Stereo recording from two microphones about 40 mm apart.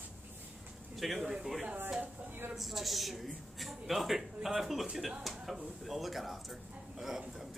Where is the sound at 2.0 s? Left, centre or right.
Right.